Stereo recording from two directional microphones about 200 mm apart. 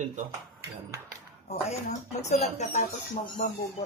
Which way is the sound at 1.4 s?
35° left (ahead or behind).